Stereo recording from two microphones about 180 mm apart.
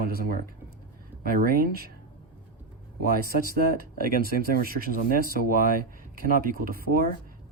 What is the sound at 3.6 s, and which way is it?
Speech, 55° right (ahead or behind).